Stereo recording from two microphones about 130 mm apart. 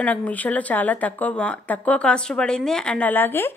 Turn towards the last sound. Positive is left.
turn(degrees=15)  # may be behind; listen again after turning